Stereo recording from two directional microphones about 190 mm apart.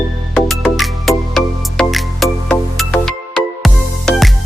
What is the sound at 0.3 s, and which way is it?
Music, centre (ahead or behind).